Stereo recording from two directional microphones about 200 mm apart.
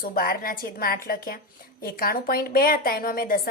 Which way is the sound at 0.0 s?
45° left (ahead or behind).